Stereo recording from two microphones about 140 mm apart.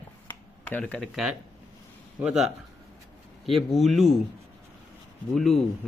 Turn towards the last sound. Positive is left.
turn(degrees=5)  # may be behind; listen again after turning